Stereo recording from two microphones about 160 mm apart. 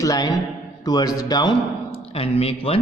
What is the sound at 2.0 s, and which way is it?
Speech, 35° left (ahead or behind).